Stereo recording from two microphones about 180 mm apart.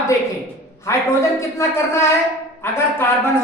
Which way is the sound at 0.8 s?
15° left (ahead or behind).